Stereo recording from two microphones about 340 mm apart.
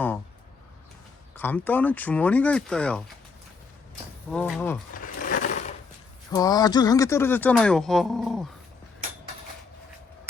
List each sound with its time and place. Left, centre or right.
1.4 s speech: centre
4.3 s speech: centre
5.0 s a sound: left
6.3 s speech: centre